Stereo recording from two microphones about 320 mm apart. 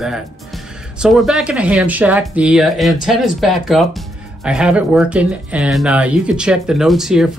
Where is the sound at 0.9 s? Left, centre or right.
Centre.